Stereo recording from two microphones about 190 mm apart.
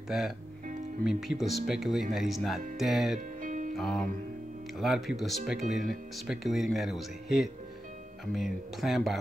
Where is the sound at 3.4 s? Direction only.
45° right (ahead or behind).